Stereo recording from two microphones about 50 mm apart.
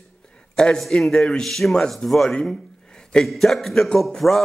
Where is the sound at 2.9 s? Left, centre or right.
Centre.